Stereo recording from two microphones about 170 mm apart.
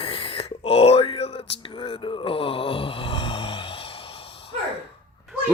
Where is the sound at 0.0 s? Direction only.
30° left (ahead or behind).